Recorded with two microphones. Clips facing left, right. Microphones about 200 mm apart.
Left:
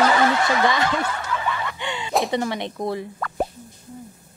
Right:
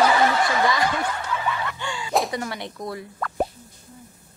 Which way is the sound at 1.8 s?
20° left (ahead or behind).